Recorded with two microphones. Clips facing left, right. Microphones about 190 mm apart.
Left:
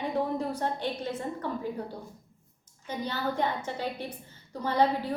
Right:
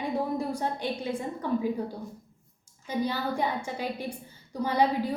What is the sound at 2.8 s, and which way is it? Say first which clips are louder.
A woman's voice: right 3 dB; 10° right (ahead or behind).